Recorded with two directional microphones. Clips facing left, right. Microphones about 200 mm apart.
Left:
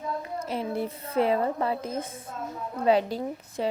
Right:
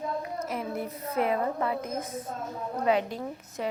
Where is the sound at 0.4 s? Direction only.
30° left (ahead or behind).